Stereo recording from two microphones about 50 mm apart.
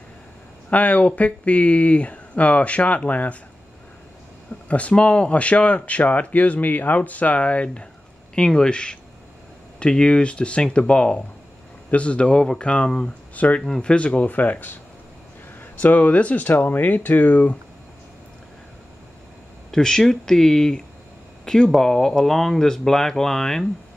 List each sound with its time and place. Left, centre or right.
0.7 s speech: left
4.6 s speech: left
13.3 s speech: left
13.6 s speech: centre; by 14.8 s left
15.8 s speech: left
16.4 s speech: left
19.7 s speech: centre